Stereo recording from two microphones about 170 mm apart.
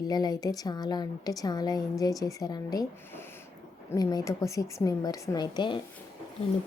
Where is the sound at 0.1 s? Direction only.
25° left (ahead or behind).